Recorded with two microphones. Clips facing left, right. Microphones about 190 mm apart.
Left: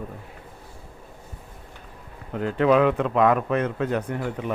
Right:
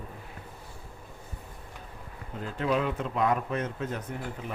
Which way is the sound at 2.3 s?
65° left (ahead or behind).